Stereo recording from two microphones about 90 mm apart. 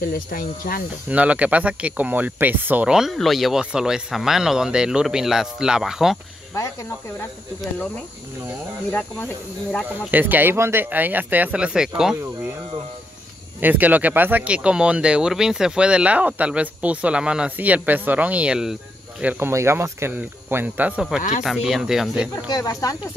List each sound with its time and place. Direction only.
1.0 s speech: 15° right (ahead or behind)
2.9 s speech: centre (ahead or behind)
6.5 s speech: 35° left (ahead or behind)
8.9 s speech: 15° left (ahead or behind)
9.9 s speech: 20° right (ahead or behind)
13.6 s speech: 20° right (ahead or behind)
19.5 s speech: 30° right (ahead or behind)
21.0 s speech: 5° right (ahead or behind)
22.3 s speech: 40° left (ahead or behind)